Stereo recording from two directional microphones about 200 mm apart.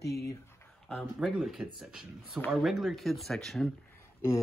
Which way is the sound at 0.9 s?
Centre (ahead or behind).